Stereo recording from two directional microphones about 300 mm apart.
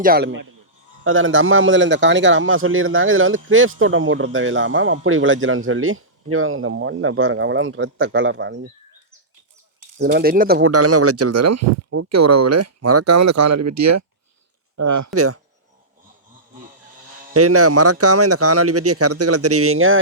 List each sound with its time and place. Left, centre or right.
0.0 s a man's voice: right
1.0 s a man's voice: right
10.0 s a man's voice: right
10.6 s speech: right
15.1 s speech: right
17.3 s speech: right